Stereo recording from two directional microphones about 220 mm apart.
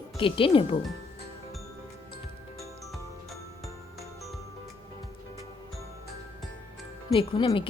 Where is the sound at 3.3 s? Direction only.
Centre (ahead or behind).